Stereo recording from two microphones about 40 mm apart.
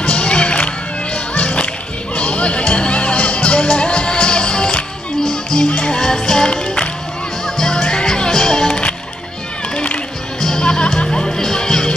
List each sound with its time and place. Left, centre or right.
0.0 s music: left
7.4 s music: centre
10.4 s music: centre